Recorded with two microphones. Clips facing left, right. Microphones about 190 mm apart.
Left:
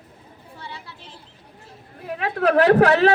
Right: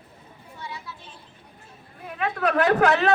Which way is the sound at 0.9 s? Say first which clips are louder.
Right 1 dB; 75° left (ahead or behind).